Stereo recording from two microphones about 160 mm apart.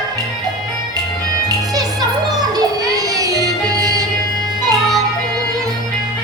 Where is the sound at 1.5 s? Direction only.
25° right (ahead or behind).